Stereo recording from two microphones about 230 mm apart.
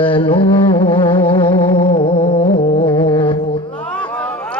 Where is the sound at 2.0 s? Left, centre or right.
Left.